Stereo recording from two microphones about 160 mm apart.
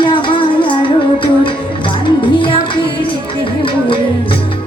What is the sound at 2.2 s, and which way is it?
Music, 30° left (ahead or behind).